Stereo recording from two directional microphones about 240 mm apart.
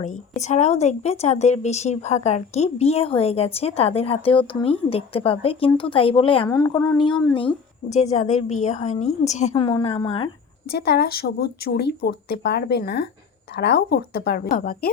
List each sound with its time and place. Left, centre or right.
0.4 s a woman's voice: left
10.7 s a woman's voice: left